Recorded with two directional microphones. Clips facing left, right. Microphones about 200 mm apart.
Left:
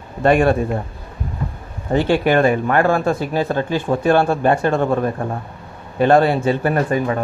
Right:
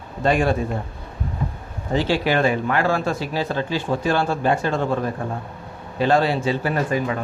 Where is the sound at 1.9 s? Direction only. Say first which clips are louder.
Left 5 dB; 55° left (ahead or behind).